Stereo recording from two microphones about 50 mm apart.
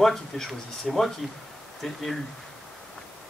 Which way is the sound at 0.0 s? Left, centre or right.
Centre.